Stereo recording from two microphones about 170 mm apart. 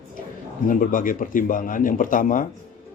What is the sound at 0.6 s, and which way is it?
Speech, 50° left (ahead or behind).